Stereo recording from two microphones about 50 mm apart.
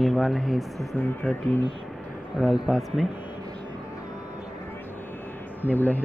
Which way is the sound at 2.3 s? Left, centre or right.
Centre.